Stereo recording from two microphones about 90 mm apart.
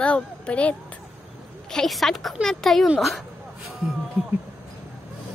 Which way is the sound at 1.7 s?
5° left (ahead or behind).